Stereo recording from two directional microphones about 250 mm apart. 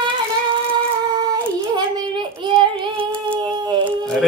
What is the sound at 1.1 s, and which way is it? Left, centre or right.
Child singing, centre.